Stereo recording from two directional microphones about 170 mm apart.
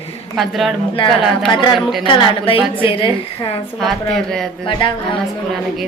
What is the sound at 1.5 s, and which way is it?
A woman's voice, 25° left (ahead or behind).